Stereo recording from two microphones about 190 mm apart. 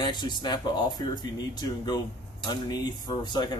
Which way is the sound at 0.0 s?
25° left (ahead or behind).